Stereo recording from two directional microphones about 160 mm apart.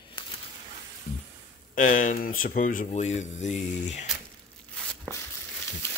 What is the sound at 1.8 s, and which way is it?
Speech, 55° left (ahead or behind).